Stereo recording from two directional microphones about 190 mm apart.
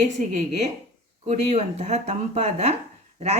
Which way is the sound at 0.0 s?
40° right (ahead or behind).